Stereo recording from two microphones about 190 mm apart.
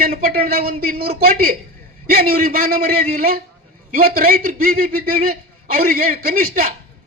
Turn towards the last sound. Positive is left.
turn(degrees=-50)  # may be behind; listen again after turning